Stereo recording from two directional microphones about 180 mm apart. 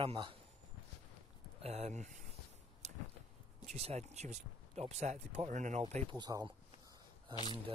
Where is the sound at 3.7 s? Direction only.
35° right (ahead or behind).